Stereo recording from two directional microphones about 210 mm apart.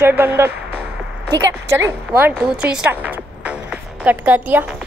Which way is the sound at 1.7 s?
10° right (ahead or behind).